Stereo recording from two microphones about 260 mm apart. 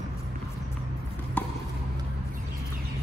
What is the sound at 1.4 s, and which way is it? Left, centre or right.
Chop, centre.